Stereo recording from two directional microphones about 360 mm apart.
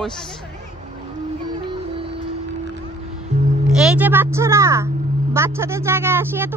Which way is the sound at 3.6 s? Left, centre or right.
Centre.